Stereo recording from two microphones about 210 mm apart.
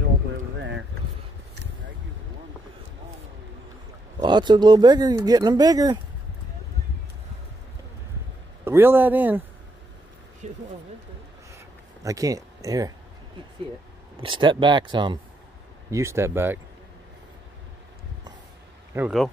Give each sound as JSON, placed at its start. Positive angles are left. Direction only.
{"t": 0.6, "sound": "vehicle", "side_deg": -55}
{"t": 4.2, "sound": "speech", "side_deg": -20}
{"t": 8.6, "sound": "a man's voice", "side_deg": -10}
{"t": 10.4, "sound": "speech", "side_deg": -35}
{"t": 11.5, "sound": "writing", "side_deg": -15}
{"t": 14.2, "sound": "speech", "side_deg": -25}
{"t": 18.9, "sound": "speech", "side_deg": 0}